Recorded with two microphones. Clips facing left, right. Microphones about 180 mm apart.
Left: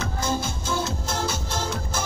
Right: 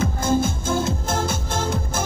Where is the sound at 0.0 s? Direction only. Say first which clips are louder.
Right 6 dB; 50° right (ahead or behind).